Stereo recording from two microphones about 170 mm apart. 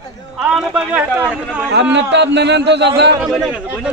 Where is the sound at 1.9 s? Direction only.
90° right.